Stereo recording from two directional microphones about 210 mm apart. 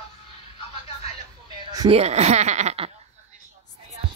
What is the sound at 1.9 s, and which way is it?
Speech, 30° right (ahead or behind).